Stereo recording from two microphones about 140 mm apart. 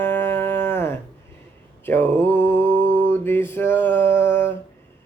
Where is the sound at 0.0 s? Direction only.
15° left (ahead or behind).